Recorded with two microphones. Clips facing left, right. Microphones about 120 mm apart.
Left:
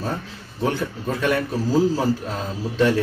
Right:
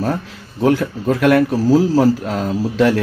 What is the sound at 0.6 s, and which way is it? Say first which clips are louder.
A man's voice: right 8 dB; 75° right (ahead or behind).